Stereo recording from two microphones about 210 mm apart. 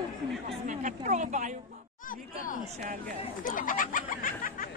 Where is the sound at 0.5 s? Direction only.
35° right (ahead or behind).